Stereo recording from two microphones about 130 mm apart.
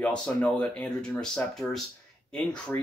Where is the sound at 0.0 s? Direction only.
10° left (ahead or behind).